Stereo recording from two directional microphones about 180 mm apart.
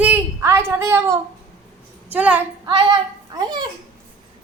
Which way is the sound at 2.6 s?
25° right (ahead or behind).